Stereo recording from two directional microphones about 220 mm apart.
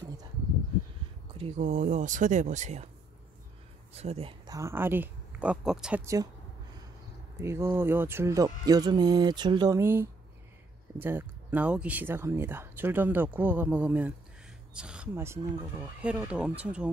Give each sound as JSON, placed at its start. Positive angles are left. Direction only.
{"t": 1.6, "sound": "speech", "side_deg": -35}
{"t": 3.9, "sound": "speech", "side_deg": -30}
{"t": 7.3, "sound": "speech", "side_deg": -10}